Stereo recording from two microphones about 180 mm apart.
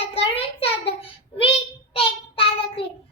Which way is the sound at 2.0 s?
30° left (ahead or behind).